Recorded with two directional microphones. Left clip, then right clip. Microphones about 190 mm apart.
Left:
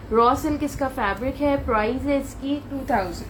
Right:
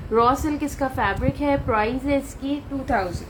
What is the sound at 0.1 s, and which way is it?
A woman's voice, 25° right (ahead or behind).